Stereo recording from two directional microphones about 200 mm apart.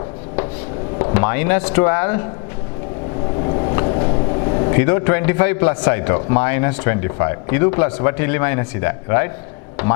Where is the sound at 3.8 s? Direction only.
30° left (ahead or behind).